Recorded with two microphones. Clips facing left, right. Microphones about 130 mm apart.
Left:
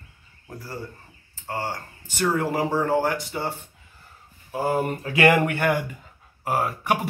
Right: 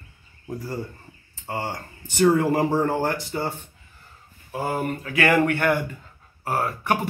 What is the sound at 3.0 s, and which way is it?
Speech, 5° left (ahead or behind).